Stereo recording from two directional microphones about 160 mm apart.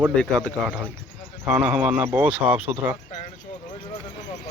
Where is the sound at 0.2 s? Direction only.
5° left (ahead or behind).